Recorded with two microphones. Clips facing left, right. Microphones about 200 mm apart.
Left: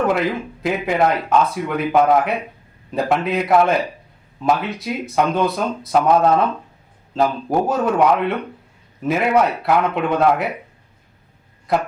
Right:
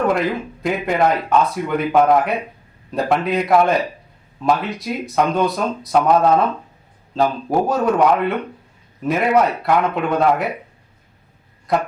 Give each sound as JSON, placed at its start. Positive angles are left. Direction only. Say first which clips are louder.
{"t": 0.0, "sound": "speech", "louder": "even", "side_deg": 0}